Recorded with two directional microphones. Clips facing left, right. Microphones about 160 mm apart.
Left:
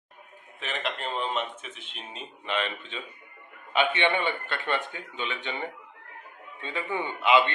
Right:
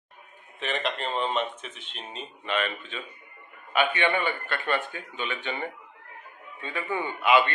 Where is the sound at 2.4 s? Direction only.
20° left (ahead or behind).